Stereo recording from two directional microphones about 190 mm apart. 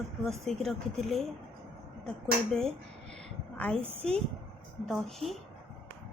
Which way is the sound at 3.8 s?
30° right (ahead or behind).